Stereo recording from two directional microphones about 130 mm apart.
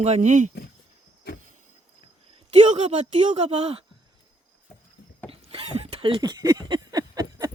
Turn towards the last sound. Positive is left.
turn(degrees=-30)  # may be behind; listen again after turning